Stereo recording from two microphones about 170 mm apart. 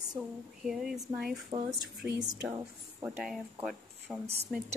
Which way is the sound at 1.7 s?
20° right (ahead or behind).